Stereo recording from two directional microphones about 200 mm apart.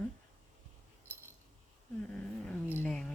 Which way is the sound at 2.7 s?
5° left (ahead or behind).